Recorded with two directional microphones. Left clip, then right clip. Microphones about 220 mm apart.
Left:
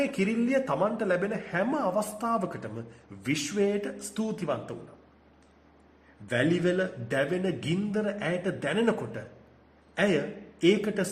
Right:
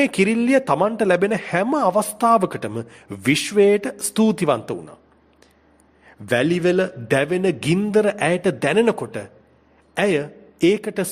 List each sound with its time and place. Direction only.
0.0 s a man's voice: 45° right (ahead or behind)
6.2 s a man's voice: 50° right (ahead or behind)